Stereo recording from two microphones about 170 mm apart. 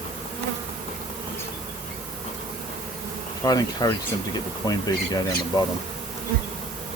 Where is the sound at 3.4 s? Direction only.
20° left (ahead or behind).